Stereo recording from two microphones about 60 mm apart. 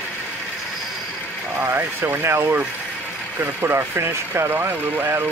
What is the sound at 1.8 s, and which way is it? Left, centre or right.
Speech, right.